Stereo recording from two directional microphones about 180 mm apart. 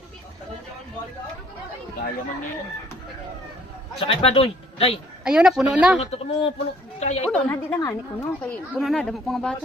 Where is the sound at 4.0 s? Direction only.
30° left (ahead or behind).